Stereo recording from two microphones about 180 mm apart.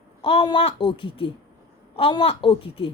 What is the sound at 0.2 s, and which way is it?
A woman's voice, 30° left (ahead or behind).